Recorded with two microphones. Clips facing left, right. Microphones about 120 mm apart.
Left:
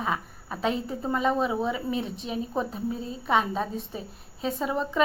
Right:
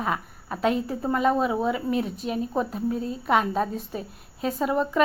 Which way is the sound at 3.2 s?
5° right (ahead or behind).